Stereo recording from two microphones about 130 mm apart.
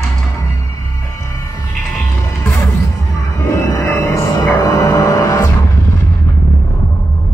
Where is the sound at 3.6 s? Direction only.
20° left (ahead or behind).